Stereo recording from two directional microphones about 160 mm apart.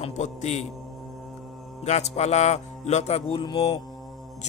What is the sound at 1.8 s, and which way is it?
Speech, 45° left (ahead or behind).